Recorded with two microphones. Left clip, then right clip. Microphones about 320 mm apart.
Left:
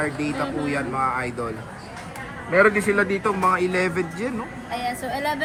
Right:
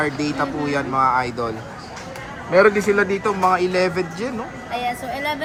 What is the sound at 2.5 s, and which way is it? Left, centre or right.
Speech, centre.